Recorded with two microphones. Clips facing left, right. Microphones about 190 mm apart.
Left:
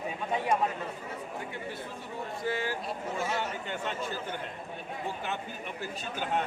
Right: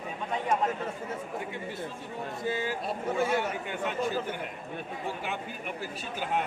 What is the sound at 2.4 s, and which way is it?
Speech, 20° right (ahead or behind).